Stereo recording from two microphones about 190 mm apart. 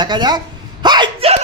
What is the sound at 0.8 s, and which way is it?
Hiccup, 25° right (ahead or behind).